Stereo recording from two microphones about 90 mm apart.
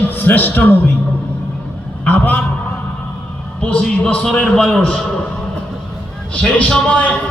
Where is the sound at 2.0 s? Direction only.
20° left (ahead or behind).